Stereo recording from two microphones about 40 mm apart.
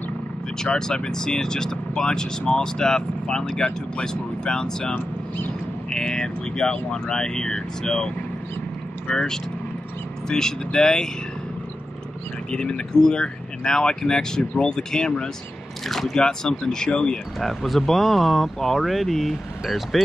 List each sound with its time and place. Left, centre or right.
0.7 s speech: centre
9.1 s speech: centre
12.4 s speech: left
15.9 s speech: centre
16.2 s speech: centre
17.4 s speech: centre